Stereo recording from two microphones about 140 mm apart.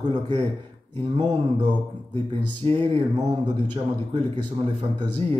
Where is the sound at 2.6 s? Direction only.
45° right (ahead or behind).